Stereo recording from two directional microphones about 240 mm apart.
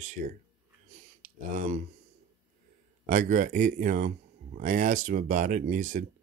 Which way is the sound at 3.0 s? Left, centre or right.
Right.